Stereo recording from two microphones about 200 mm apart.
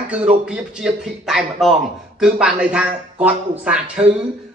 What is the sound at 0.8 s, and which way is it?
Speech, centre (ahead or behind).